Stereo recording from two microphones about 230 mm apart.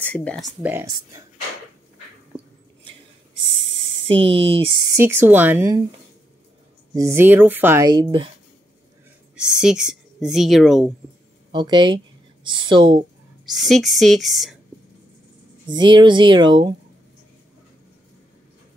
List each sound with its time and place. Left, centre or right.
0.0 s a woman's voice: centre
0.6 s speech: centre
3.6 s a sound: right
4.0 s speech: right
6.9 s speech: centre
9.3 s speech: centre
11.5 s speech: centre
13.5 s a woman's voice: centre
15.7 s speech: centre